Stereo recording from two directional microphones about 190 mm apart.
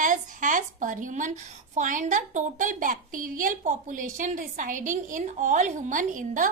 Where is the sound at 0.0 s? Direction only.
45° right (ahead or behind).